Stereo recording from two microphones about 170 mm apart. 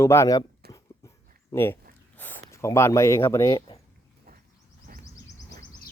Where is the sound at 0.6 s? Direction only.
65° right (ahead or behind).